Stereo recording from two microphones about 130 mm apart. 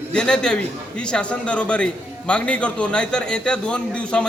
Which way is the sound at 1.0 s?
5° left (ahead or behind).